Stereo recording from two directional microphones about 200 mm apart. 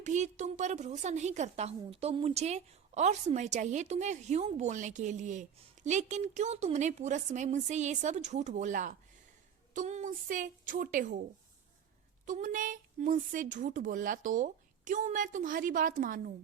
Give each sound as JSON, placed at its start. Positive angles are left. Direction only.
{"t": 0.0, "sound": "a woman's voice", "side_deg": -35}
{"t": 12.2, "sound": "a woman's voice", "side_deg": -40}